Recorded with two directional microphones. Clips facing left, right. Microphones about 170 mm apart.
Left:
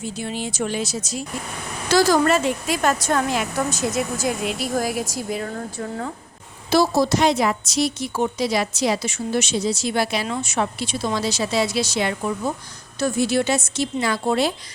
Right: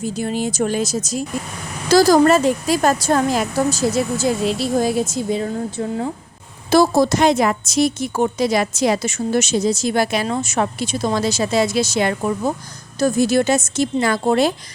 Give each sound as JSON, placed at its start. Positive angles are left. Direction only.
{"t": 0.0, "sound": "a woman's voice", "side_deg": -45}
{"t": 6.7, "sound": "a woman's voice", "side_deg": -50}